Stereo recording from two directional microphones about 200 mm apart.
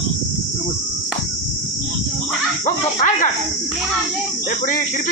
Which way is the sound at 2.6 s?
40° left (ahead or behind).